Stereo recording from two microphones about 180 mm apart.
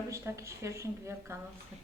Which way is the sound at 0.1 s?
15° right (ahead or behind).